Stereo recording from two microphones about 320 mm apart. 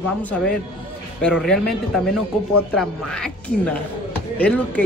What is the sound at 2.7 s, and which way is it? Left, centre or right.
A woman's voice, centre.